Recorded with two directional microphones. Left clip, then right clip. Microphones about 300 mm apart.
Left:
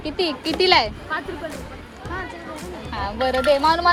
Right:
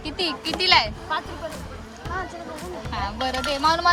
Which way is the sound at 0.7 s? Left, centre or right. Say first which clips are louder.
Right 2 dB; centre.